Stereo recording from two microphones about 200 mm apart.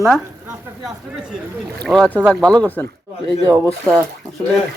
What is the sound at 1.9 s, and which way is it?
Speech, 5° left (ahead or behind).